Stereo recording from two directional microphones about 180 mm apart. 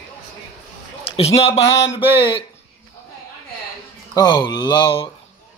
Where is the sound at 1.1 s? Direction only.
35° left (ahead or behind).